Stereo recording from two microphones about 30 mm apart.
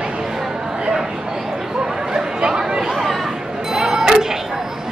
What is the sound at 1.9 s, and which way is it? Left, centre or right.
Chatter, centre.